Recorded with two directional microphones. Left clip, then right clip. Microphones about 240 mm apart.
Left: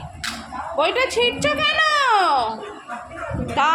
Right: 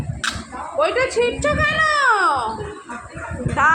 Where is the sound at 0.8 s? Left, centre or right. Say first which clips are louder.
Right 1 dB; left.